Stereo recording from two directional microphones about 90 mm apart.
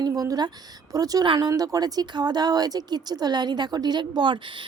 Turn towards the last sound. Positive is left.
turn(degrees=-60)  # may be behind; listen again after turning